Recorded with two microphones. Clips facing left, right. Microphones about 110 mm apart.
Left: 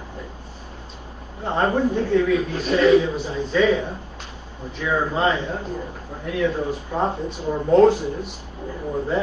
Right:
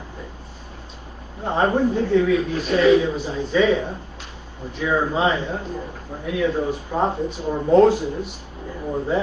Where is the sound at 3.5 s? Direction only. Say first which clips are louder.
Right 1 dB; 5° right (ahead or behind).